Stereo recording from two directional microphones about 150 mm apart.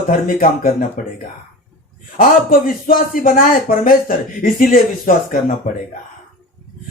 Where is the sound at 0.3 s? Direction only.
70° left (ahead or behind).